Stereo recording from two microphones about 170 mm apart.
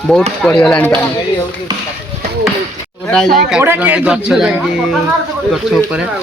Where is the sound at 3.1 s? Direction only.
5° left (ahead or behind).